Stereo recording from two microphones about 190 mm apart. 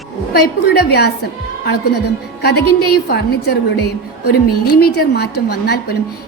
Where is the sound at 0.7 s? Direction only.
60° left (ahead or behind).